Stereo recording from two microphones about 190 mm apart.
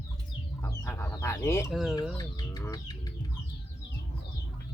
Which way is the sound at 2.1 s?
20° left (ahead or behind).